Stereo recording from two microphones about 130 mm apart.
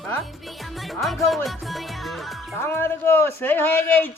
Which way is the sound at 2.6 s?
15° left (ahead or behind).